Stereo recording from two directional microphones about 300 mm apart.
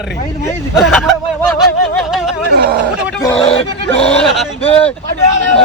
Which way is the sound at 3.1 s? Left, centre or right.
Centre.